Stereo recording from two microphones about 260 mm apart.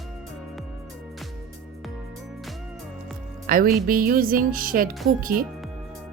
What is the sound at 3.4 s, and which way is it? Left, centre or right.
Speech, right.